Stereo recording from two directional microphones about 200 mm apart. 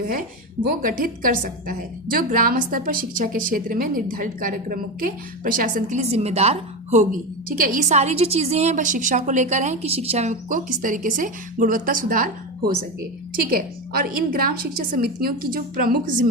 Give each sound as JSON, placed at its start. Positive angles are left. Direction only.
{"t": 0.7, "sound": "a woman's voice", "side_deg": -45}